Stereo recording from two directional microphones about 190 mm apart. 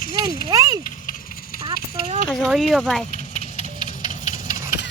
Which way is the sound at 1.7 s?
50° left (ahead or behind).